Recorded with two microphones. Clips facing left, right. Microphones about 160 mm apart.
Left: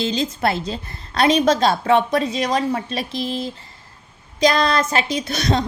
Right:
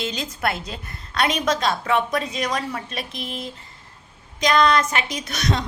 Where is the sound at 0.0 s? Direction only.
30° left (ahead or behind).